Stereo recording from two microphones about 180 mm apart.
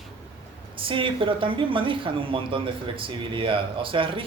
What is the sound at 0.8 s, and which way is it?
A woman's voice, 30° right (ahead or behind).